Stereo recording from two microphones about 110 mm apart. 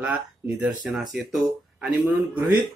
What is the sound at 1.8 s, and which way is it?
Speech, 15° right (ahead or behind).